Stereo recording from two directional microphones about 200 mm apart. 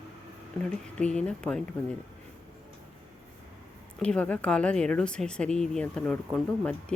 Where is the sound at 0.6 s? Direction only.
5° left (ahead or behind).